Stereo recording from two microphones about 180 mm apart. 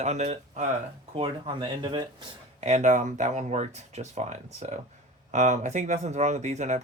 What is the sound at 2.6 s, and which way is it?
Speech, 40° right (ahead or behind).